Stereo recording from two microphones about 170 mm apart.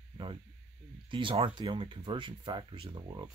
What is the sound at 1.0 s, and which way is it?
Speech, 30° right (ahead or behind).